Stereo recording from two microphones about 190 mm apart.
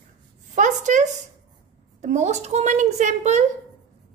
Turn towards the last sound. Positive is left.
turn(degrees=-40)  # may be behind; listen again after turning